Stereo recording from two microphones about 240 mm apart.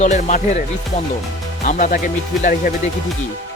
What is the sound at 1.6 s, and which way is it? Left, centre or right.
Speech, left.